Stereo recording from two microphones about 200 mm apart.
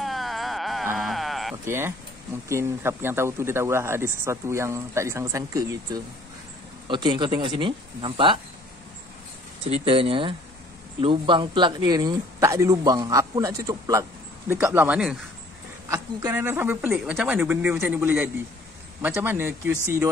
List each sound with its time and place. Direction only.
0.0 s a sound: centre (ahead or behind)
1.7 s speech: 10° right (ahead or behind)
9.7 s speech: 25° right (ahead or behind)